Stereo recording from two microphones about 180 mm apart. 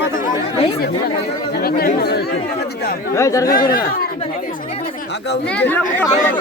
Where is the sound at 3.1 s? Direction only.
15° left (ahead or behind).